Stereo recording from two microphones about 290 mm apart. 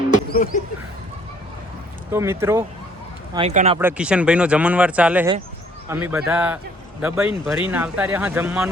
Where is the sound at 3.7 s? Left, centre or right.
Centre.